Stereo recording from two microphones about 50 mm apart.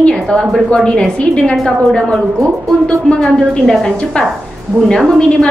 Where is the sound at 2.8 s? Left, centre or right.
Centre.